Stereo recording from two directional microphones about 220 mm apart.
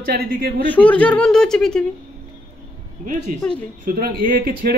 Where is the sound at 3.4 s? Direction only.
5° left (ahead or behind).